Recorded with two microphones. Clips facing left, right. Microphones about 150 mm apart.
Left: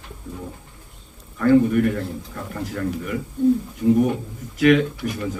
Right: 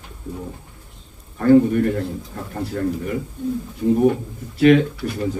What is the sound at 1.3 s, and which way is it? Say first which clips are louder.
Speech: right 2 dB; 35° right (ahead or behind).